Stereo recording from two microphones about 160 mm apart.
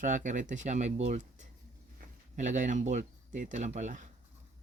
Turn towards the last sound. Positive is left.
turn(degrees=-50)  # may be behind; listen again after turning